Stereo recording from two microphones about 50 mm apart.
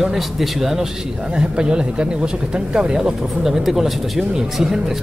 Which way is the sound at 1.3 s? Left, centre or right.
Centre.